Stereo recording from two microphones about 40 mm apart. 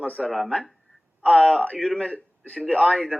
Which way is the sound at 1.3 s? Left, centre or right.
Centre.